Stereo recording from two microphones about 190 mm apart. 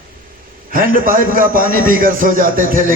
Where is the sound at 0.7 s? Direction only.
50° right (ahead or behind).